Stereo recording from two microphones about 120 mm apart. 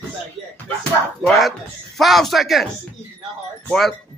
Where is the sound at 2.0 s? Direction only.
Centre (ahead or behind).